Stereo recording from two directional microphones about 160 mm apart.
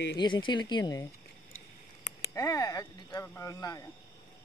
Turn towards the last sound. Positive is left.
turn(degrees=20)  # may be behind; listen again after turning